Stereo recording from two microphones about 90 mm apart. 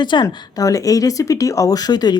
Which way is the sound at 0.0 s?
60° left (ahead or behind).